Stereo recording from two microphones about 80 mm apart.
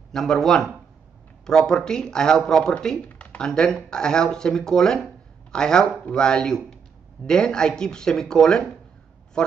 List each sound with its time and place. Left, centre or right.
0.1 s speech: centre